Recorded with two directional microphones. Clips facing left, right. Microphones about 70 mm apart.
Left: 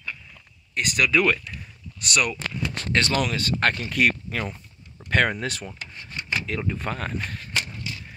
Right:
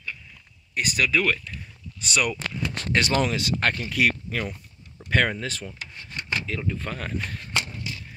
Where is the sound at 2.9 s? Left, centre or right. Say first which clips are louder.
Right 1 dB; centre.